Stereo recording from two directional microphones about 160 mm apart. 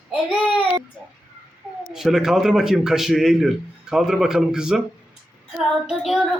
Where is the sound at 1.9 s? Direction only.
Centre (ahead or behind).